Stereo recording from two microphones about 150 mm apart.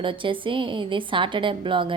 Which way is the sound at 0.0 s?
35° right (ahead or behind).